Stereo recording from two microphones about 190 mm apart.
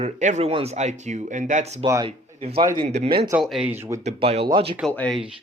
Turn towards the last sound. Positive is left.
turn(degrees=5)  # may be behind; listen again after turning